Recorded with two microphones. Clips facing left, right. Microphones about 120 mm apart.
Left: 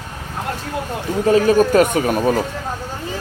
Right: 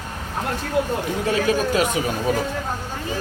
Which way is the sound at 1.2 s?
40° left (ahead or behind).